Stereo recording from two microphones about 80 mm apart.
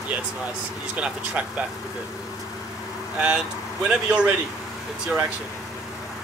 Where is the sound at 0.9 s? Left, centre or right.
Centre.